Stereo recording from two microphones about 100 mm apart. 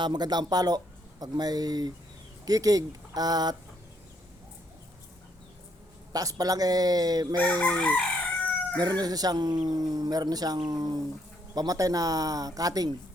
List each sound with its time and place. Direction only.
0.0 s speech: 45° right (ahead or behind)
6.1 s speech: 40° right (ahead or behind)
7.3 s chicken: 15° left (ahead or behind)
8.8 s speech: 45° right (ahead or behind)